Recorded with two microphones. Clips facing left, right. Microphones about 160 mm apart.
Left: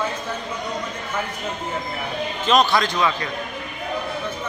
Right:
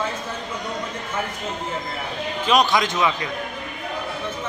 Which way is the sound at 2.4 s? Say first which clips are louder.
Left 1 dB; 10° right (ahead or behind).